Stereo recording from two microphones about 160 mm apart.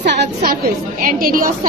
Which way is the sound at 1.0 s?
60° right (ahead or behind).